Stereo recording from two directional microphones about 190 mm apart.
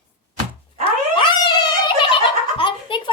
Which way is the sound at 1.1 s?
25° left (ahead or behind).